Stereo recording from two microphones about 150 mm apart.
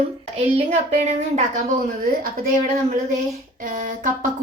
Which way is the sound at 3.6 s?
60° right (ahead or behind).